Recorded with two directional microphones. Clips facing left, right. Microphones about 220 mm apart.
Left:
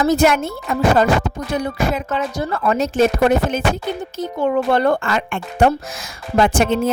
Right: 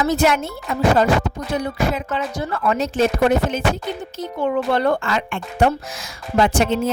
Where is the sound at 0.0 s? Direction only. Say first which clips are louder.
Left 3 dB; 45° left (ahead or behind).